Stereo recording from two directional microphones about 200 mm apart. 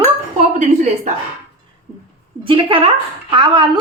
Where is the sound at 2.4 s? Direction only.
25° right (ahead or behind).